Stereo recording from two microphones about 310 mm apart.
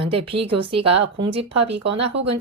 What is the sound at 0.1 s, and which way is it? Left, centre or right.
Speech, centre.